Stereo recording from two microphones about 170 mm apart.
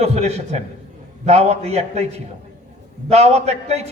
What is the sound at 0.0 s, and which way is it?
A man's voice, 40° right (ahead or behind).